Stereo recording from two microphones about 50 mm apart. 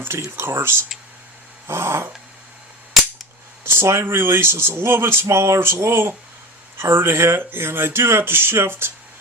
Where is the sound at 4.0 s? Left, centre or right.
Right.